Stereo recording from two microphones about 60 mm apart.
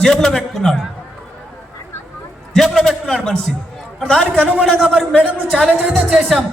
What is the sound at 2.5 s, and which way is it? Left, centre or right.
A man's voice, centre.